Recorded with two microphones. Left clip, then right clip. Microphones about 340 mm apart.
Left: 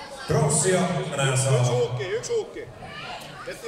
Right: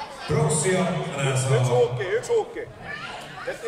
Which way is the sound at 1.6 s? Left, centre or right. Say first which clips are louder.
Right 3 dB; right.